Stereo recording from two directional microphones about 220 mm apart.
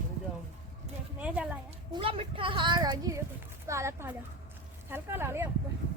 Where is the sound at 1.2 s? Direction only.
5° right (ahead or behind).